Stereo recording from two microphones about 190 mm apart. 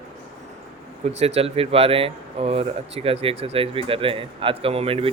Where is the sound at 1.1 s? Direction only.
35° right (ahead or behind).